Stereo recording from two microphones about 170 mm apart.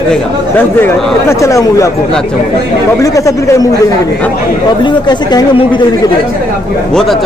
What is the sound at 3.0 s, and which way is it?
Speech, 20° left (ahead or behind).